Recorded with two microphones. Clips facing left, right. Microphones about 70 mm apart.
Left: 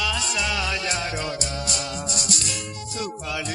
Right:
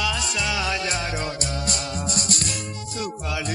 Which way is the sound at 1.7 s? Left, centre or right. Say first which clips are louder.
Right 1 dB; right.